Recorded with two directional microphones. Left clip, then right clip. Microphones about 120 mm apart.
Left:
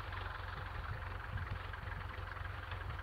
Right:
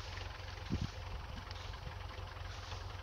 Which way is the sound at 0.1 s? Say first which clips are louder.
Left 3 dB; 40° left (ahead or behind).